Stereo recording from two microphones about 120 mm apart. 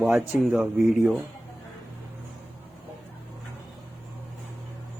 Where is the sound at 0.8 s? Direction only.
20° right (ahead or behind).